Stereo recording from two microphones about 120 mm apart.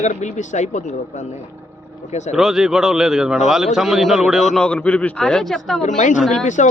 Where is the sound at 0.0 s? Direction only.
80° left.